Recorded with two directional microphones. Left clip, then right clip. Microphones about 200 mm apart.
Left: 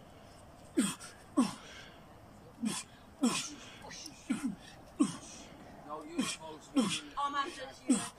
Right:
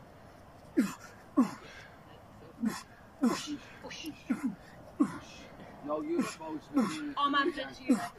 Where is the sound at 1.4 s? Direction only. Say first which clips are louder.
Right 3 dB; centre (ahead or behind).